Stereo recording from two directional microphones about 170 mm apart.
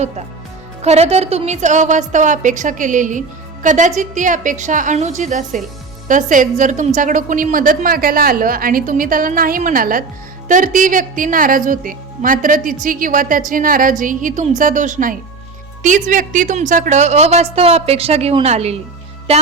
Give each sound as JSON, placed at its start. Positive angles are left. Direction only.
{"t": 0.8, "sound": "a woman's voice", "side_deg": -40}